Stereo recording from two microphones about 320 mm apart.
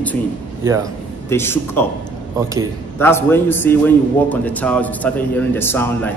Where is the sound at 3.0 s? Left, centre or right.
Centre.